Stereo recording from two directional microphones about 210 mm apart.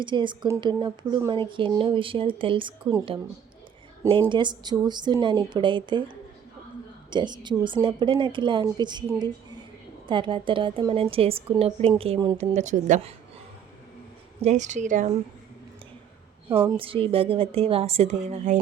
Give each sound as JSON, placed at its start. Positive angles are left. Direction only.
{"t": 0.0, "sound": "speech", "side_deg": -20}
{"t": 4.3, "sound": "speech", "side_deg": -20}
{"t": 7.1, "sound": "speech", "side_deg": -20}
{"t": 12.4, "sound": "a woman's voice", "side_deg": -35}
{"t": 14.4, "sound": "a woman's voice", "side_deg": -35}
{"t": 16.5, "sound": "a woman's voice", "side_deg": -10}
{"t": 16.7, "sound": "speech", "side_deg": -25}